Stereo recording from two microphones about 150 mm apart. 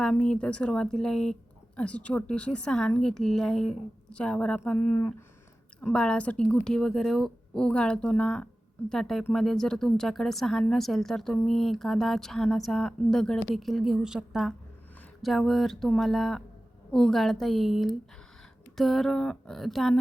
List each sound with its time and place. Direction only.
0.0 s a woman's voice: 5° left (ahead or behind)